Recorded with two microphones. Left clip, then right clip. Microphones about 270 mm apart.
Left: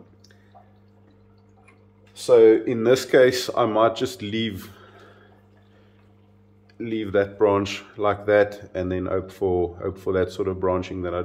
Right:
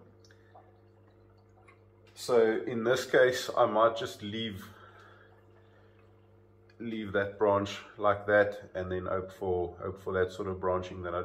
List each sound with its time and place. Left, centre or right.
2.1 s speech: left
6.8 s speech: left